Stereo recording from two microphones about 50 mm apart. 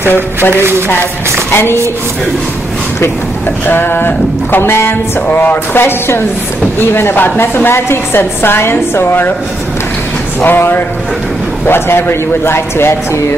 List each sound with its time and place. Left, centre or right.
0.1 s a woman's voice: left
3.6 s a woman's voice: left
5.3 s a woman's voice: left
10.4 s a woman's voice: left